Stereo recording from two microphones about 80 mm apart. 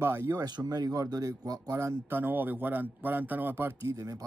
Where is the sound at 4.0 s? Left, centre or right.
Right.